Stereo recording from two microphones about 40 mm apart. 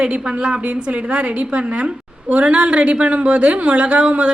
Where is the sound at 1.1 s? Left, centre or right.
Right.